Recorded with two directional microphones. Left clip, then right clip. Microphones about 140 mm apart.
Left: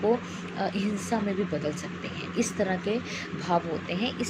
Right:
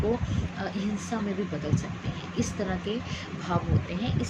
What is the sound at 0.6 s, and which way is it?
Speech, 20° left (ahead or behind).